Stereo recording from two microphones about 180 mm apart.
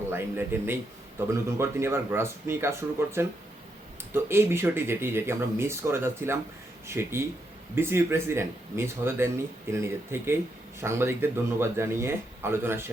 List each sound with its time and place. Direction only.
0.1 s speech: 10° right (ahead or behind)